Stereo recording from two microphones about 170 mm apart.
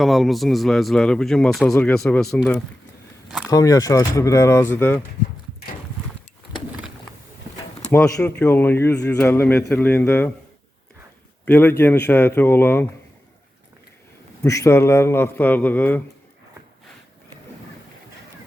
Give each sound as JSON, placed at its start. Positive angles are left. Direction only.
{"t": 0.0, "sound": "speech", "side_deg": 0}
{"t": 3.5, "sound": "speech", "side_deg": 20}
{"t": 7.9, "sound": "speech", "side_deg": 10}
{"t": 11.4, "sound": "speech", "side_deg": 10}
{"t": 14.4, "sound": "speech", "side_deg": 15}